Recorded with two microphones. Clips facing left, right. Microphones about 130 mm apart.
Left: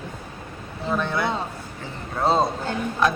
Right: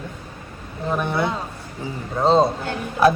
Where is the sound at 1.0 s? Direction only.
20° right (ahead or behind).